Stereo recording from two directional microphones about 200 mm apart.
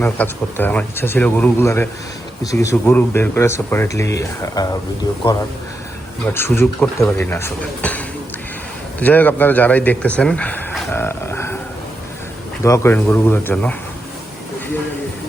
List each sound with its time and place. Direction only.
0.0 s speech: 10° left (ahead or behind)
6.3 s speech: 10° left (ahead or behind)
12.6 s speech: 15° left (ahead or behind)